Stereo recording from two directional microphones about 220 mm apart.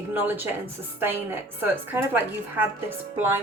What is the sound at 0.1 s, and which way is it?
A woman's voice, 10° right (ahead or behind).